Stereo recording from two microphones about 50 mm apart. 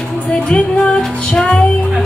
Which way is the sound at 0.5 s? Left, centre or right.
Left.